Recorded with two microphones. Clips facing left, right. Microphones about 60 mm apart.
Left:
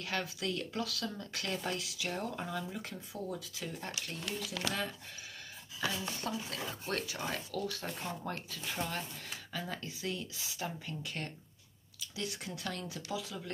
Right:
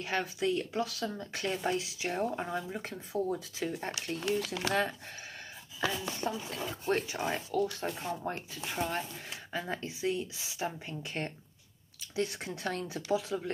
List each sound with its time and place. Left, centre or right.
0.0 s speech: right
4.4 s speech: right
6.2 s speech: right